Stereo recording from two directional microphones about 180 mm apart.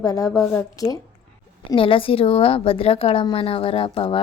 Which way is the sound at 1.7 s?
30° left (ahead or behind).